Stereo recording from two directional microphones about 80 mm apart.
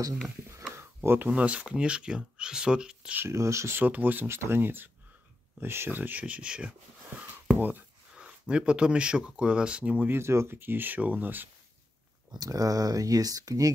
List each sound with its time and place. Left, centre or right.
0.7 s a sound: right
1.3 s speech: centre
3.2 s speech: right
3.8 s speech: right
10.1 s speech: right
12.3 s speech: right